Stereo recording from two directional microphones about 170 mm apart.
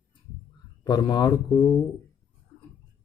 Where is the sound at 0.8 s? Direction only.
25° left (ahead or behind).